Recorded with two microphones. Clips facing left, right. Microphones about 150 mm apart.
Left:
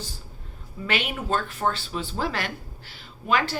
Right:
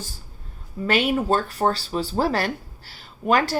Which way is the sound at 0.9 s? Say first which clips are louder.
Right 7 dB; 40° right (ahead or behind).